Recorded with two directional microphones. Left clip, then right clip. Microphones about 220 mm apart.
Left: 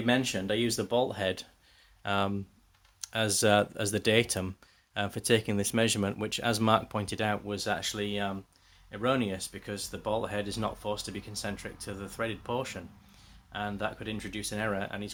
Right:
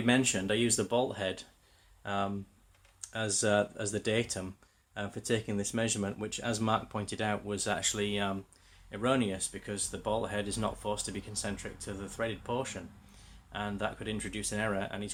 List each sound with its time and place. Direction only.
0.0 s speech: 10° left (ahead or behind)
8.9 s speech: 20° left (ahead or behind)